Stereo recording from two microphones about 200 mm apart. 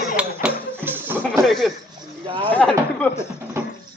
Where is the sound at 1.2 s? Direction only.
Centre (ahead or behind).